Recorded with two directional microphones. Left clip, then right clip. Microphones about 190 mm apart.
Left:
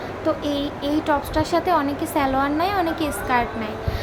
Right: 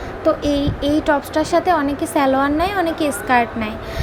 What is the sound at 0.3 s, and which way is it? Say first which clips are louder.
A woman's voice: right 6 dB; 20° right (ahead or behind).